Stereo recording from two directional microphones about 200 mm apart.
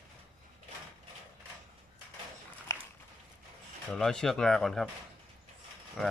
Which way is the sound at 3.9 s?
5° left (ahead or behind).